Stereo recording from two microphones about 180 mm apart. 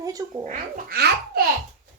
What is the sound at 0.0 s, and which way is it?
Speech, 20° right (ahead or behind).